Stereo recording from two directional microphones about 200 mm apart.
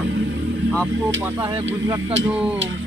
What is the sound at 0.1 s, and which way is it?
Vehicle, 65° right (ahead or behind).